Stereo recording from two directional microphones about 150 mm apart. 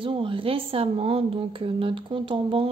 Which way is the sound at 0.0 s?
35° right (ahead or behind).